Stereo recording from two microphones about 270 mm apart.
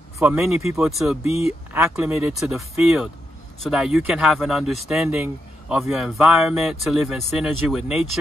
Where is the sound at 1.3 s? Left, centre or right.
Left.